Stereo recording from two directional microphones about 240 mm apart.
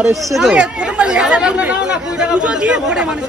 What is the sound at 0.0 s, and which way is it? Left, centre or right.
Speech, centre.